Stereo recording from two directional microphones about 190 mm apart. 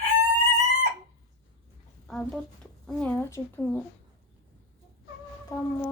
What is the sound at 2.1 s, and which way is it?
A child's voice, centre (ahead or behind).